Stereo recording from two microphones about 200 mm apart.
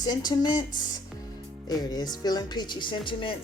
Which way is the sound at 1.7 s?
20° left (ahead or behind).